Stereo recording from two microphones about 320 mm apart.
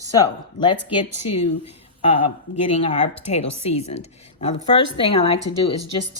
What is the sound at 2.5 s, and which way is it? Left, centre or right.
Speech, left.